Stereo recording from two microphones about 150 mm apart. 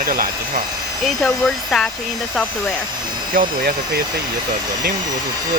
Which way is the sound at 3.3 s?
65° right (ahead or behind).